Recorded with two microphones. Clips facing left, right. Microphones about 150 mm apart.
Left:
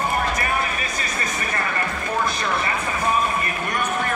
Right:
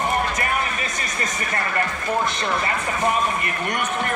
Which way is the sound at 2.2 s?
20° right (ahead or behind).